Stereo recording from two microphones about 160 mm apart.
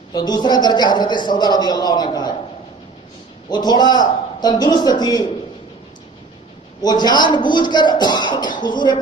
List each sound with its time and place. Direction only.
0.1 s a woman's voice: 25° left (ahead or behind)
3.5 s a woman's voice: 25° left (ahead or behind)
6.8 s a woman's voice: 25° left (ahead or behind)